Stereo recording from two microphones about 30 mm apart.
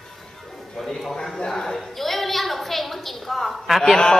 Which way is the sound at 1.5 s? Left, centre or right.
Centre.